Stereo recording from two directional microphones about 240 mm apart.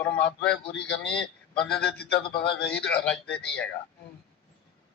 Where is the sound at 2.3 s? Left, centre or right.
Left.